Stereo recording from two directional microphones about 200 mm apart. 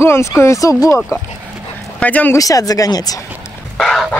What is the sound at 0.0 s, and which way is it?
Speech, 10° left (ahead or behind).